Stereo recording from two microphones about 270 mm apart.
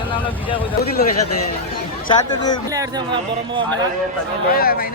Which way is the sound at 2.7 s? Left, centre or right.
Centre.